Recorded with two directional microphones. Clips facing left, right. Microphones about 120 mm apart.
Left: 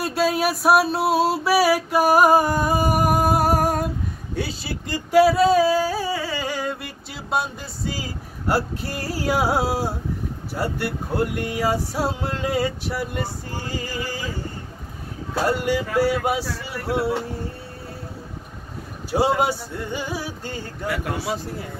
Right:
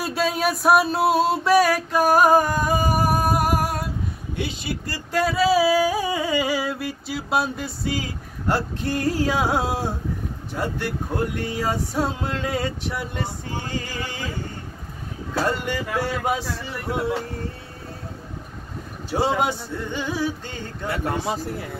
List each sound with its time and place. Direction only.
0.0 s music: centre (ahead or behind)
4.4 s speech: 35° left (ahead or behind)
4.8 s a sound: 20° left (ahead or behind)
5.2 s music: centre (ahead or behind)
8.5 s male singing: 10° left (ahead or behind)
15.4 s male singing: 10° left (ahead or behind)
19.0 s male singing: 10° left (ahead or behind)